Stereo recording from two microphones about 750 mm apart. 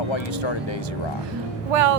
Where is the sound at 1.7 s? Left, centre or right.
Right.